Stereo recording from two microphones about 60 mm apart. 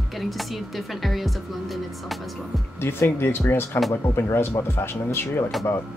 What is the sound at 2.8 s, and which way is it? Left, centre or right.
Speech, left.